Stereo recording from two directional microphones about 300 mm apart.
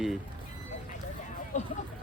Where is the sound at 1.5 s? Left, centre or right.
Left.